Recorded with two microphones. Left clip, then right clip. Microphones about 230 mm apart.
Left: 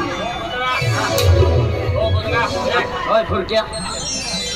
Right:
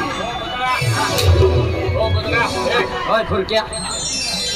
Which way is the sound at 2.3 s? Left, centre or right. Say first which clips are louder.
Right 1 dB; right.